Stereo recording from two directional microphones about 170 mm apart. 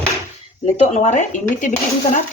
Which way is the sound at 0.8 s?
45° left (ahead or behind).